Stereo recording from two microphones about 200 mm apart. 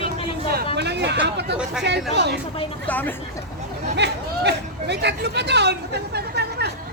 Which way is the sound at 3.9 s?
55° right (ahead or behind).